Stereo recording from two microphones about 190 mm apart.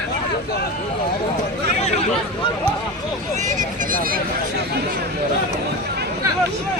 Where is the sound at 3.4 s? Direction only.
45° right (ahead or behind).